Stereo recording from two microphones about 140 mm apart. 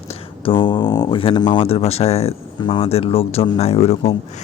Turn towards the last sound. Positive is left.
turn(degrees=45)  # may be behind; listen again after turning